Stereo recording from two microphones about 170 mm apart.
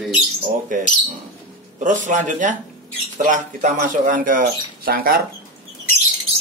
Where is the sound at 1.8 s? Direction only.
45° right (ahead or behind).